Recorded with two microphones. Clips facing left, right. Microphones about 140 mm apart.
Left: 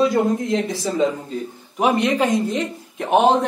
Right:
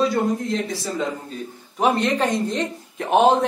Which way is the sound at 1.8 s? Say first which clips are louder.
Left 2 dB; 15° left (ahead or behind).